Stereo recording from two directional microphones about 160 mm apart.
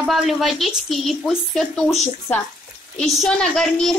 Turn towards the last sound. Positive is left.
turn(degrees=5)  # may be behind; listen again after turning